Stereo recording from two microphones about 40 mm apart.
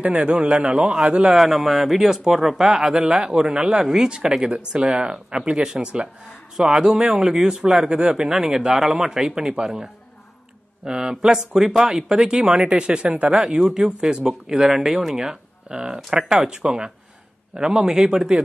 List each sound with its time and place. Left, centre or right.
0.0 s speech: right
1.3 s speech: centre
3.0 s speech: right
7.9 s speech: right
8.3 s speech: centre
10.9 s speech: centre
13.3 s speech: centre